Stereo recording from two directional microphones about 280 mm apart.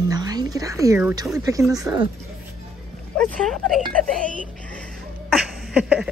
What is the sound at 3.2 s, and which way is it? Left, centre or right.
Speech, centre.